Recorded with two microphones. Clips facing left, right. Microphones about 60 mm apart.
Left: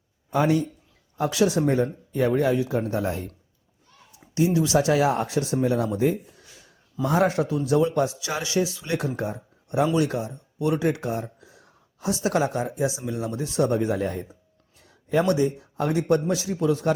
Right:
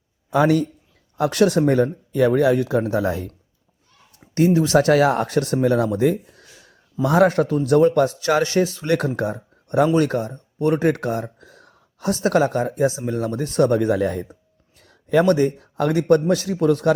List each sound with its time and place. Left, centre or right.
0.3 s speech: right
1.1 s speech: right
4.4 s speech: right
8.9 s speech: right
14.8 s speech: right